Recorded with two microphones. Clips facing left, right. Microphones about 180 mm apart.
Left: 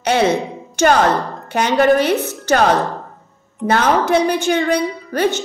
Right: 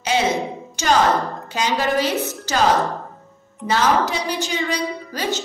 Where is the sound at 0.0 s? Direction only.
60° left (ahead or behind).